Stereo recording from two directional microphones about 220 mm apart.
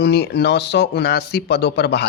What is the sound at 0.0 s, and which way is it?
A man's voice, 50° left (ahead or behind).